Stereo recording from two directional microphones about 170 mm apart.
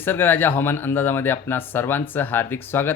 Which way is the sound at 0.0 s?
10° left (ahead or behind).